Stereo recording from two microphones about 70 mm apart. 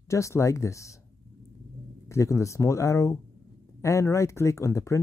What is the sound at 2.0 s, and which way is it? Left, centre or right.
Speech, left.